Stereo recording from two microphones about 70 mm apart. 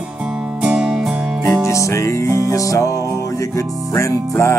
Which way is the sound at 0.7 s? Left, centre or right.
Centre.